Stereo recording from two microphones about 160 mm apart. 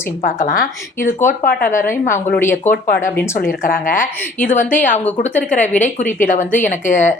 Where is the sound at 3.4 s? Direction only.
55° left (ahead or behind).